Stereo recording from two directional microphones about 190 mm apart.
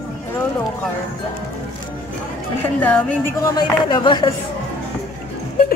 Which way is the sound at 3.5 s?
25° left (ahead or behind).